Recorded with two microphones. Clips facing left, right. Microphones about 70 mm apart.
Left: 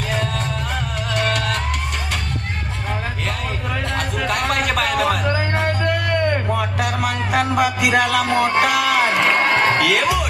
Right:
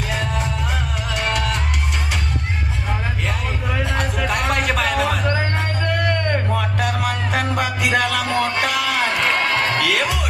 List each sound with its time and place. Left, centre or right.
0.1 s music: centre
3.9 s music: centre
9.3 s a sound: left
9.7 s music: centre